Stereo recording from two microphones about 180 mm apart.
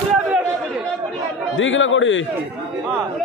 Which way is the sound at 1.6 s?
90° left.